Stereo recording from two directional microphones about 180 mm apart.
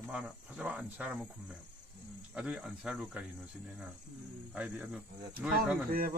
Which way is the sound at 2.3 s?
5° right (ahead or behind).